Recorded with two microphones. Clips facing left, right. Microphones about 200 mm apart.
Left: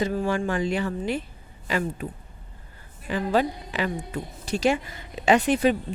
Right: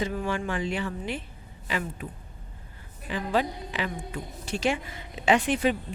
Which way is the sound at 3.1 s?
45° left (ahead or behind).